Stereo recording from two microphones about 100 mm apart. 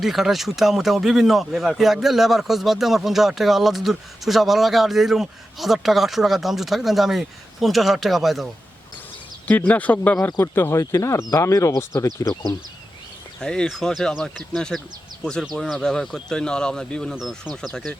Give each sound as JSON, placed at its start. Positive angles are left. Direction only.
{"t": 0.0, "sound": "a man's voice", "side_deg": 0}
{"t": 9.5, "sound": "speech", "side_deg": 15}
{"t": 13.4, "sound": "a man's voice", "side_deg": 5}
{"t": 17.2, "sound": "a man's voice", "side_deg": -5}